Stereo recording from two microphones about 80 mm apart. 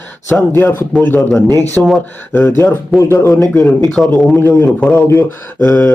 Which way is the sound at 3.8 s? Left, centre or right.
Centre.